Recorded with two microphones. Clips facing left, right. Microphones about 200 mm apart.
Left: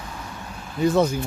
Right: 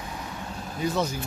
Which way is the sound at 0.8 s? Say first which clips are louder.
Left 8 dB; 50° left (ahead or behind).